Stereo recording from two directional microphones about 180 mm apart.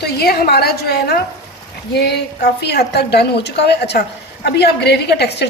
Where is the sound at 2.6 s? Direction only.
65° left (ahead or behind).